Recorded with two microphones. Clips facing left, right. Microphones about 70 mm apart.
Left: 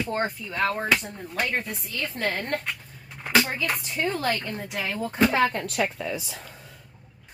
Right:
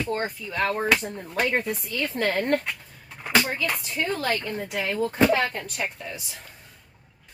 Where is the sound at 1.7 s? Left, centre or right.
Centre.